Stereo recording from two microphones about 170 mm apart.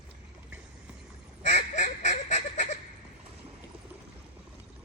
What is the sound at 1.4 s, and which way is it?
Goose, 45° left (ahead or behind).